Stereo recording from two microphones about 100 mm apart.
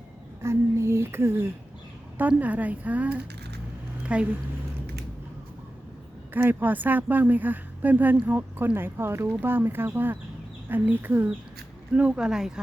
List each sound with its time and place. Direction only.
0.4 s speech: 25° right (ahead or behind)
6.3 s a woman's voice: 20° right (ahead or behind)